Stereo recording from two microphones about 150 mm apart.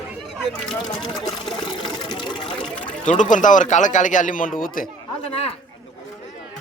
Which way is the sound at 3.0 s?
55° left (ahead or behind).